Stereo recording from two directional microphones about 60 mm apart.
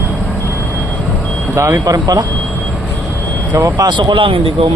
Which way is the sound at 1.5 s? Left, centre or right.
Right.